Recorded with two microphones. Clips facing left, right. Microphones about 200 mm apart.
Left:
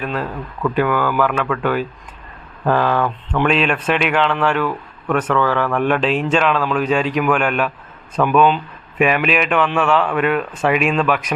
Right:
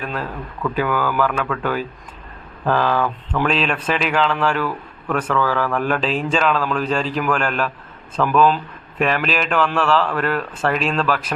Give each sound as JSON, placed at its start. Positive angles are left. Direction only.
{"t": 0.0, "sound": "speech", "side_deg": 5}